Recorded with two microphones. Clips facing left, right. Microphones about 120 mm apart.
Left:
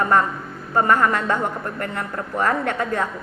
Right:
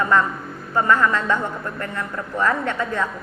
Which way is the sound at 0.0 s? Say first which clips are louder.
Left 1 dB; 45° left (ahead or behind).